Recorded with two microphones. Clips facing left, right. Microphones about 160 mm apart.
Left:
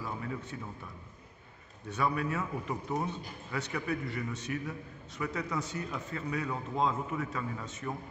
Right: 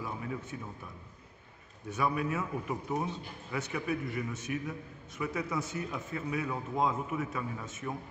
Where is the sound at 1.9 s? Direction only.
5° right (ahead or behind).